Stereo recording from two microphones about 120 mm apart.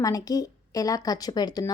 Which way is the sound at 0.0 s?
30° left (ahead or behind).